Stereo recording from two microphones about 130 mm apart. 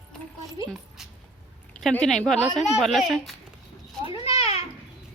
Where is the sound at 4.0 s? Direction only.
45° left (ahead or behind).